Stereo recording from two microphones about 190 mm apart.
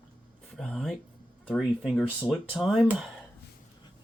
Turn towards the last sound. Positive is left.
turn(degrees=0)  # may be behind; listen again after turning